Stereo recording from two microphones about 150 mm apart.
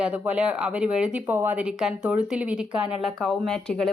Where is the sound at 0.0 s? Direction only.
10° right (ahead or behind).